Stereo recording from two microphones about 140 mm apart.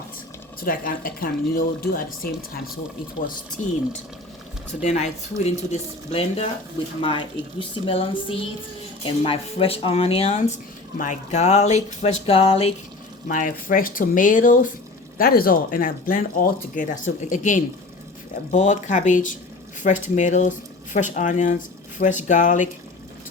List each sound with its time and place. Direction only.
0.6 s speech: 90° left
3.6 s speech: 60° left (ahead or behind)
4.8 s speech: 55° left (ahead or behind)
7.0 s a sound: 35° left (ahead or behind)
9.0 s speech: 40° left (ahead or behind)
10.9 s speech: 60° left (ahead or behind); by 12.7 s 45° left (ahead or behind)
13.2 s speech: 75° left (ahead or behind)
15.2 s speech: 90° left; by 22.7 s 65° left (ahead or behind)